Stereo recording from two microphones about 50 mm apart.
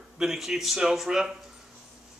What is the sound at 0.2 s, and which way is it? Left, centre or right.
Speech, centre.